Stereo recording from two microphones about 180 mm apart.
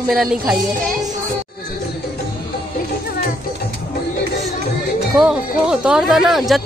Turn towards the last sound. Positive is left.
turn(degrees=0)  # may be behind; listen again after turning